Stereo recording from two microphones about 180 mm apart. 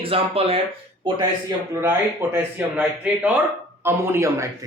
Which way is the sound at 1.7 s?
15° right (ahead or behind).